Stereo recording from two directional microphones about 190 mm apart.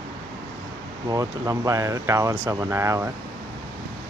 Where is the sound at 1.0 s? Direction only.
15° right (ahead or behind).